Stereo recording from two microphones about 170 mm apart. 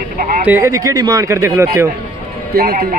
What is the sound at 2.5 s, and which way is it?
Speech, 65° right (ahead or behind).